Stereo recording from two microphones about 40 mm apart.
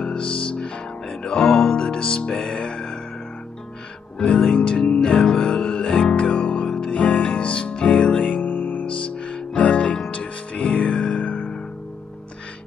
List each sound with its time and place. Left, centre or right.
0.0 s music: left
4.5 s music: left
5.0 s music: centre
8.2 s music: left
9.1 s music: left